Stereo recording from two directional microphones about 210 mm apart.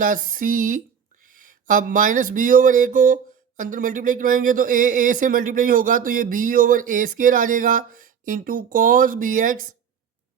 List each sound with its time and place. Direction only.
0.0 s speech: 40° right (ahead or behind)